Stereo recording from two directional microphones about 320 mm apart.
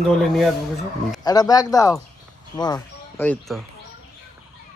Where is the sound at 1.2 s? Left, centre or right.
Centre.